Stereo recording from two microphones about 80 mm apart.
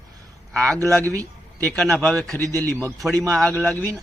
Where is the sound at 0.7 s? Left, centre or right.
Right.